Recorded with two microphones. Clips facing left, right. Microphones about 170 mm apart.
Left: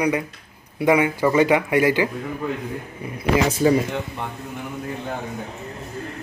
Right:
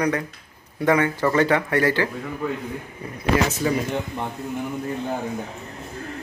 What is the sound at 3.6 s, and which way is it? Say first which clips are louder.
Speech: left 6 dB; 30° left (ahead or behind).